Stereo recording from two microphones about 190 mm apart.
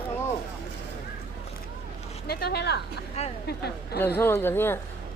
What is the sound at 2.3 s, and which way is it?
Speech, 55° left (ahead or behind).